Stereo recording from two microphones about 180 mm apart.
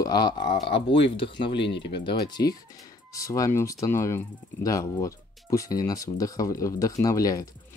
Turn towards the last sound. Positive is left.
turn(degrees=20)  # may be behind; listen again after turning